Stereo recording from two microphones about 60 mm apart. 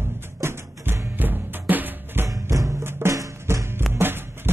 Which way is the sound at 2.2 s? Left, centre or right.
Right.